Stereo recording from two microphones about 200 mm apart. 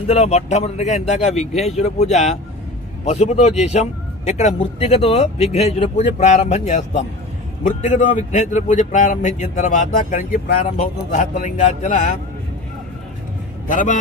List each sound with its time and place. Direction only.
0.1 s a man's voice: 35° left (ahead or behind)
13.7 s a man's voice: 40° left (ahead or behind)